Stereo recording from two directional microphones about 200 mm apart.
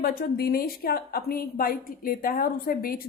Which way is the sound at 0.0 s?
50° left (ahead or behind).